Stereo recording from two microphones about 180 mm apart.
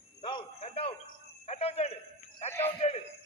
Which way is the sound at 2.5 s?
15° left (ahead or behind).